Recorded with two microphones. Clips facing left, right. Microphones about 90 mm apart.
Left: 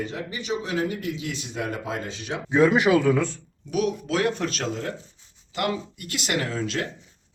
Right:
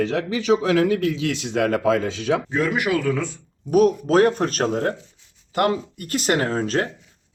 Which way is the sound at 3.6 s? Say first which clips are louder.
Right 8 dB; 45° right (ahead or behind).